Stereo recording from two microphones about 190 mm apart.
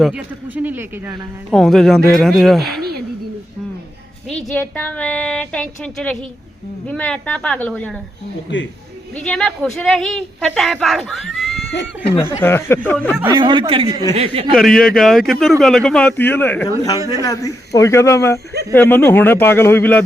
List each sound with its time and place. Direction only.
0.0 s a man's voice: 5° right (ahead or behind)
1.5 s speech: centre (ahead or behind)
4.3 s a man's voice: 5° left (ahead or behind)
8.5 s speech: 70° left (ahead or behind)
9.1 s speech: 5° left (ahead or behind)
12.4 s a man's voice: 10° left (ahead or behind)
13.3 s a man's voice: 25° right (ahead or behind)
14.5 s a man's voice: centre (ahead or behind)